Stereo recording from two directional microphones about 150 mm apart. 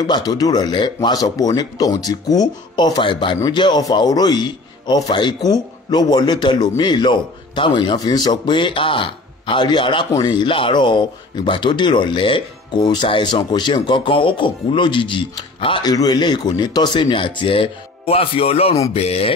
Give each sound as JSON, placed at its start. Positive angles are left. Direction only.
{"t": 0.0, "sound": "a man's voice", "side_deg": 25}